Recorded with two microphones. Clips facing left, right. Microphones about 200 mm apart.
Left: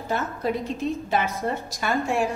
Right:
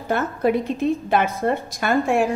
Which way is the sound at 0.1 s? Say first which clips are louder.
Right 6 dB; 55° right (ahead or behind).